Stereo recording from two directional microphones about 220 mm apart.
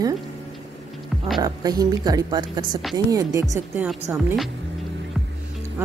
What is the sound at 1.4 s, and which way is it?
A woman's voice, 15° right (ahead or behind).